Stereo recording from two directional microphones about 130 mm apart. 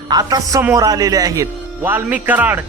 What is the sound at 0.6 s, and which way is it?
A man's voice, 25° right (ahead or behind).